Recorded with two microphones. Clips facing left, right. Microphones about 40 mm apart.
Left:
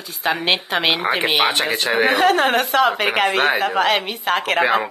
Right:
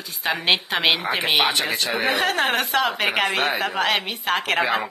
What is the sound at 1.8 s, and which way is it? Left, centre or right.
Speech, left.